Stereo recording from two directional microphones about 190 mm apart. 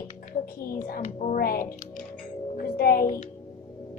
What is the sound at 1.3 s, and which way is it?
Speech, 50° left (ahead or behind).